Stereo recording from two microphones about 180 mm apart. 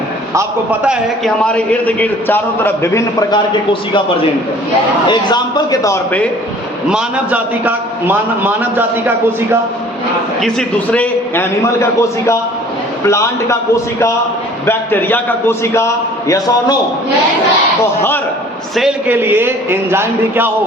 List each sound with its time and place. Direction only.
0.3 s a man's voice: 10° right (ahead or behind)
1.2 s a man's voice: 5° left (ahead or behind); by 4.0 s 25° left (ahead or behind)
5.0 s a man's voice: 25° left (ahead or behind)
6.9 s a man's voice: 10° right (ahead or behind)
10.4 s a man's voice: 5° left (ahead or behind)
14.7 s a man's voice: 10° left (ahead or behind)
18.8 s a man's voice: 5° right (ahead or behind)